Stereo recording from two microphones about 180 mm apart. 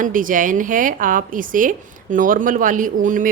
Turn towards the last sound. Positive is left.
turn(degrees=-45)  # may be behind; listen again after turning